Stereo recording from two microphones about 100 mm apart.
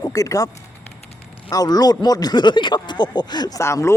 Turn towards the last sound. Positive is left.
turn(degrees=30)  # may be behind; listen again after turning